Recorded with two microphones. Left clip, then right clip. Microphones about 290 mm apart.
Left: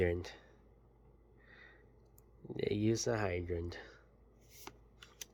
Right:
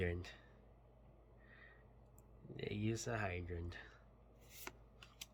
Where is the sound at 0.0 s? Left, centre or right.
Centre.